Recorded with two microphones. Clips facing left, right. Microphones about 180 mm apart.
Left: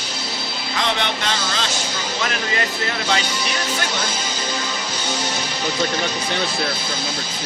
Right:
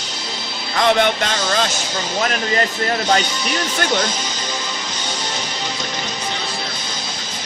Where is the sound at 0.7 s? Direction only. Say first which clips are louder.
Right 8 dB; 50° right (ahead or behind).